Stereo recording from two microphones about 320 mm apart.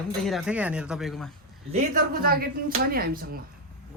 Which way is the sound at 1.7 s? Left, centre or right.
Right.